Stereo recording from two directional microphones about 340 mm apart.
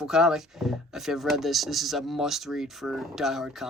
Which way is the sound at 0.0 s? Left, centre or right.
Centre.